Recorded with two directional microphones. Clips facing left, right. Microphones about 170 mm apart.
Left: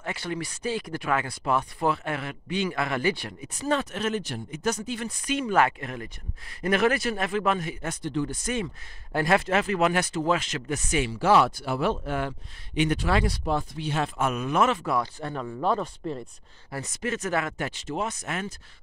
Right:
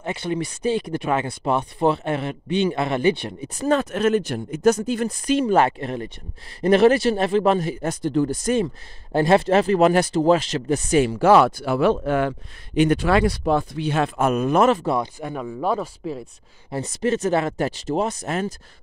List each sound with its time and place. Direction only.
0.0 s speech: 20° right (ahead or behind)
3.5 s speech: 45° right (ahead or behind); by 12.4 s 75° right (ahead or behind)
12.9 s speech: 65° right (ahead or behind)
14.2 s speech: 45° right (ahead or behind)
15.1 s speech: 10° right (ahead or behind)
16.7 s speech: 30° right (ahead or behind)